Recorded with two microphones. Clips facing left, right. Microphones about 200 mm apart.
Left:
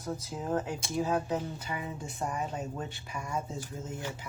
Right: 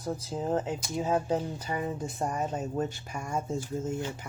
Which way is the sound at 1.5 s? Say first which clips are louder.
Right 5 dB; 40° right (ahead or behind).